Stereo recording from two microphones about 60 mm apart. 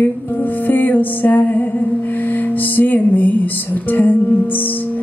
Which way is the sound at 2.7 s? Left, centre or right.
Left.